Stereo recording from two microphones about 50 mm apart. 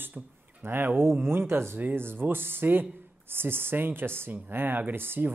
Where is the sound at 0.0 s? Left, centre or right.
Right.